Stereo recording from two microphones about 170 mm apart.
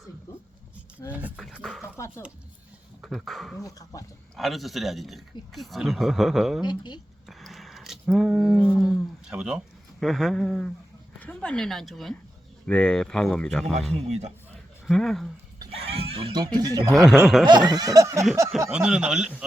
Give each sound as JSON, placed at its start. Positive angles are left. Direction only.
{"t": 1.1, "sound": "speech", "side_deg": -5}
{"t": 1.8, "sound": "a sound", "side_deg": 15}
{"t": 3.0, "sound": "speech", "side_deg": 0}
{"t": 3.6, "sound": "speech", "side_deg": 20}
{"t": 4.4, "sound": "speech", "side_deg": 0}
{"t": 6.7, "sound": "speech", "side_deg": 25}
{"t": 7.3, "sound": "a sound", "side_deg": 0}
{"t": 10.0, "sound": "speech", "side_deg": 0}
{"t": 13.9, "sound": "a man's voice", "side_deg": -40}
{"t": 14.8, "sound": "speech", "side_deg": 0}
{"t": 15.7, "sound": "speech", "side_deg": -35}
{"t": 18.7, "sound": "speech", "side_deg": -5}